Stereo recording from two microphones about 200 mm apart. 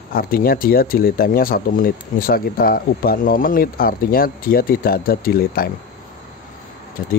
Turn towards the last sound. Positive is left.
turn(degrees=50)  # may be behind; listen again after turning